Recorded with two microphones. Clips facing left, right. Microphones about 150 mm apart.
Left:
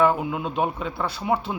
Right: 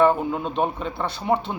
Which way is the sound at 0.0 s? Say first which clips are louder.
Right 2 dB; 5° left (ahead or behind).